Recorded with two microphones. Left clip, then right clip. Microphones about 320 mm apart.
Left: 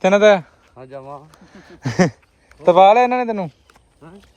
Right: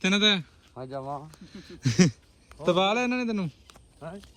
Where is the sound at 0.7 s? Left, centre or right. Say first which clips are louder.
Left 1 dB; right.